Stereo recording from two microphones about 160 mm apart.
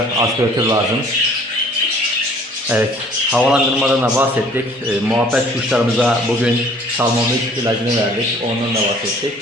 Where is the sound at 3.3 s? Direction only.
5° right (ahead or behind).